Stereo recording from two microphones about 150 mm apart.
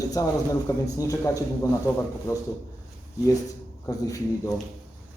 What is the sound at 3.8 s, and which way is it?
Speech, 25° left (ahead or behind).